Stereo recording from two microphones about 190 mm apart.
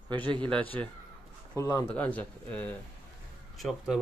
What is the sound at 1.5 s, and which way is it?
Speech, 20° left (ahead or behind).